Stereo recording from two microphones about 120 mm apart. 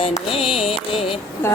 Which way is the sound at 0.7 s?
50° left (ahead or behind).